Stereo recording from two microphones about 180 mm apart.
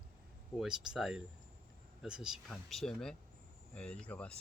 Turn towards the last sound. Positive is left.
turn(degrees=5)  # may be behind; listen again after turning